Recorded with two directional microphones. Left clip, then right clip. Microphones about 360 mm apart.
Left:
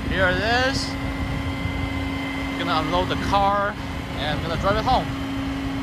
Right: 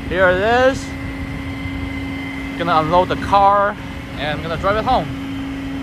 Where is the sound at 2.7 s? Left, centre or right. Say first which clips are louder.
Right 9 dB; centre.